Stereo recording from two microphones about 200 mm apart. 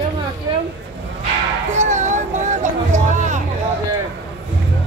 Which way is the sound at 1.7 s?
35° right (ahead or behind).